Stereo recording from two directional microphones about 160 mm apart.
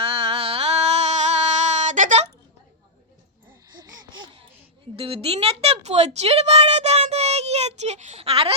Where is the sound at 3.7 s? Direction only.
25° right (ahead or behind).